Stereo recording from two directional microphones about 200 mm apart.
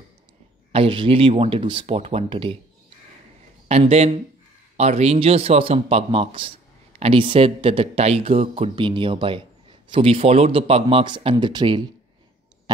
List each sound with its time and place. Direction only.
0.7 s a man's voice: 25° right (ahead or behind)
3.6 s a man's voice: 30° right (ahead or behind)